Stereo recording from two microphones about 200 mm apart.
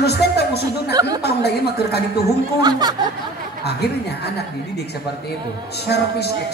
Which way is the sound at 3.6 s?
55° left (ahead or behind).